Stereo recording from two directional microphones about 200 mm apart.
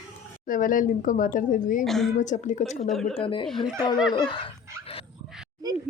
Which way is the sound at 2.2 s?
35° left (ahead or behind).